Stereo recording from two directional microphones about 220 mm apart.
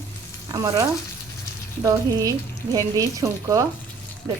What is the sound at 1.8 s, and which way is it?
Speech, 15° right (ahead or behind).